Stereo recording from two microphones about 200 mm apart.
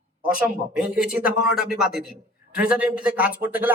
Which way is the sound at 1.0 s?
5° right (ahead or behind).